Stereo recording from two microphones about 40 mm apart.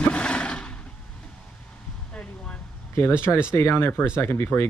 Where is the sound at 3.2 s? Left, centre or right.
Left.